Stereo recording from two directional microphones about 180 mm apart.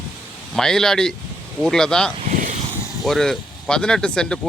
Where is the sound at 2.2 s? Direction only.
45° right (ahead or behind).